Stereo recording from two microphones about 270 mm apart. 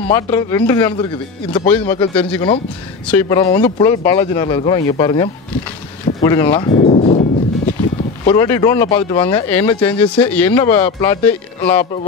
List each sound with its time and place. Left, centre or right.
0.0 s speech: centre
6.2 s a sound: centre
8.2 s speech: centre